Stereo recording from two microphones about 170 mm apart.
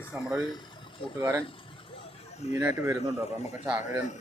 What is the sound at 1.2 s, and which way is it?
Speech, 15° right (ahead or behind).